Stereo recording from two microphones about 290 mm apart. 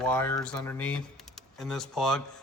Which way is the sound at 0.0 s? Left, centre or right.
Centre.